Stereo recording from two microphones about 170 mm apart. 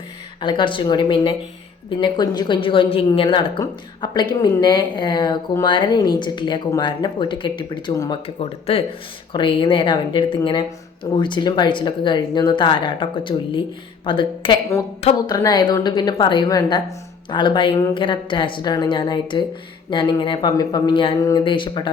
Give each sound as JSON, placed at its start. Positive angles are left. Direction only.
{"t": 0.3, "sound": "a woman's voice", "side_deg": 30}
{"t": 8.4, "sound": "a woman's voice", "side_deg": 35}